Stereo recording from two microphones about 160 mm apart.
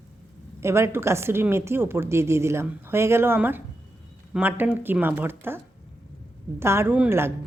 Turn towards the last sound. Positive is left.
turn(degrees=-15)  # may be behind; listen again after turning